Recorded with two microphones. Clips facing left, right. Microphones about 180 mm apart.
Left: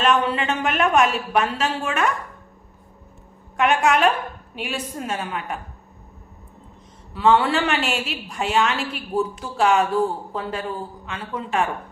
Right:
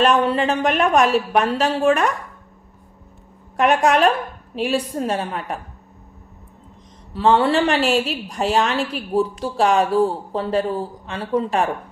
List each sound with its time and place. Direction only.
0.0 s speech: 35° right (ahead or behind)
3.6 s speech: 35° right (ahead or behind)
7.1 s speech: 35° right (ahead or behind)